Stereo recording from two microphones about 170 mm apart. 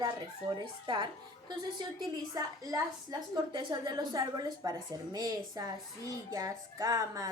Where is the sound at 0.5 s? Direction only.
30° right (ahead or behind).